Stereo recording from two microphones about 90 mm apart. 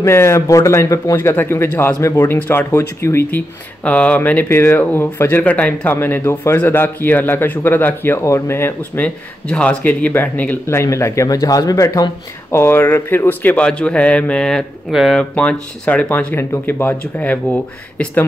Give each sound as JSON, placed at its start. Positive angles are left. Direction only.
{"t": 0.0, "sound": "speech", "side_deg": 30}
{"t": 1.1, "sound": "speech", "side_deg": 25}
{"t": 2.3, "sound": "speech", "side_deg": 20}
{"t": 2.7, "sound": "speech", "side_deg": 30}
{"t": 3.3, "sound": "speech", "side_deg": 15}
{"t": 9.0, "sound": "speech", "side_deg": 10}
{"t": 12.5, "sound": "a man's voice", "side_deg": 25}
{"t": 14.9, "sound": "speech", "side_deg": -5}
{"t": 15.1, "sound": "a man's voice", "side_deg": 10}